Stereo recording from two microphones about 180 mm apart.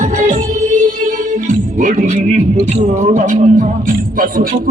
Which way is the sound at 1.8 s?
45° right (ahead or behind).